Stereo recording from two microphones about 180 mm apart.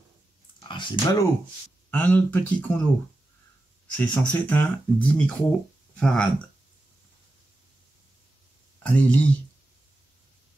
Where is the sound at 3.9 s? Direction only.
10° left (ahead or behind).